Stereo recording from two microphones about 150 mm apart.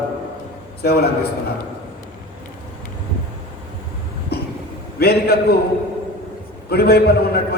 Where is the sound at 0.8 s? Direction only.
90° left.